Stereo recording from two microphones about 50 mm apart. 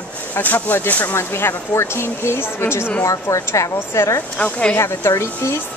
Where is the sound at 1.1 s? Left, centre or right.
Left.